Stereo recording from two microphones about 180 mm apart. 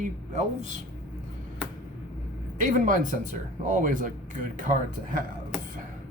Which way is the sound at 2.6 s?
45° right (ahead or behind).